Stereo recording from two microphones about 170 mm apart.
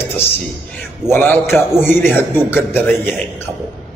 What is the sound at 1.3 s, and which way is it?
Speech, 5° right (ahead or behind).